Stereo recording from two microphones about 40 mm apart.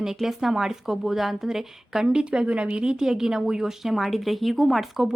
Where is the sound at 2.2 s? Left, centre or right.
Right.